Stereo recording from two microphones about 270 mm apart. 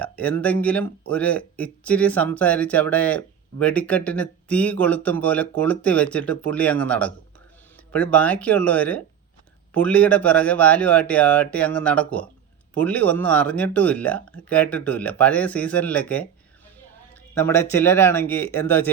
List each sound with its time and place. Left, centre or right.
0.0 s speech: centre
17.3 s a man's voice: centre